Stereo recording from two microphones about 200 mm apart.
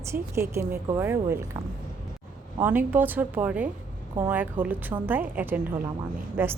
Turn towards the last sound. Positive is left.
turn(degrees=-10)  # may be behind; listen again after turning